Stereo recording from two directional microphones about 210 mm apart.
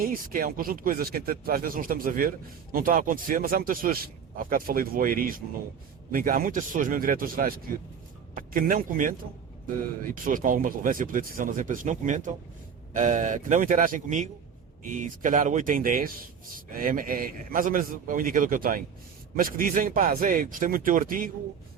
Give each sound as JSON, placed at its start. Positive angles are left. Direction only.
{"t": 0.0, "sound": "speech", "side_deg": -45}